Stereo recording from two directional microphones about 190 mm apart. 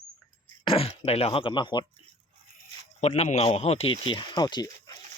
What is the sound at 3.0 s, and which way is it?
Speech, 35° left (ahead or behind).